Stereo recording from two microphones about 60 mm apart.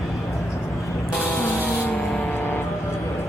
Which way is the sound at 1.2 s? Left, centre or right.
Left.